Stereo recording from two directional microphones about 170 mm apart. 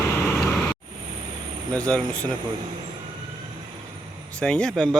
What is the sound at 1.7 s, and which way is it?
Speech, 5° left (ahead or behind).